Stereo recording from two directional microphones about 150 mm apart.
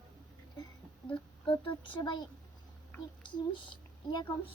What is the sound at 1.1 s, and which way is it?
A child's voice, 35° left (ahead or behind).